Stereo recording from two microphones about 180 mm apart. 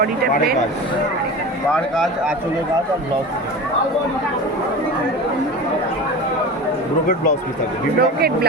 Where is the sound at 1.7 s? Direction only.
Centre (ahead or behind).